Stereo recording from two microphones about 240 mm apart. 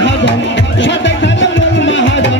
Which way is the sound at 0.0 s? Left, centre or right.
Left.